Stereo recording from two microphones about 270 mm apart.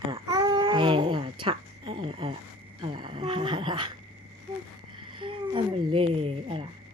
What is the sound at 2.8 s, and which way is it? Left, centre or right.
Speech, centre.